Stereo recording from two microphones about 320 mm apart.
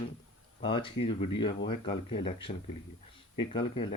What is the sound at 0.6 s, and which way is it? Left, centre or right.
Speech, centre.